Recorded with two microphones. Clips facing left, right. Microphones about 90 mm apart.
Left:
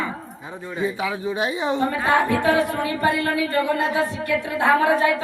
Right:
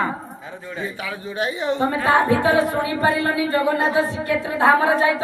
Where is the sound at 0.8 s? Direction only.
20° left (ahead or behind).